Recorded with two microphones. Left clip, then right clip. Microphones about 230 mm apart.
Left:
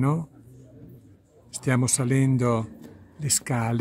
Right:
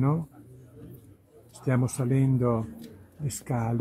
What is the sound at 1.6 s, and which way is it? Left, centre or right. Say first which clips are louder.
Speech: left 4 dB; centre.